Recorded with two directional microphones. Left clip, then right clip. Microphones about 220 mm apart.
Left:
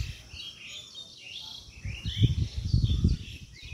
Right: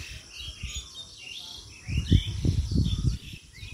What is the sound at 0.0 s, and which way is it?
Bird, 50° right (ahead or behind).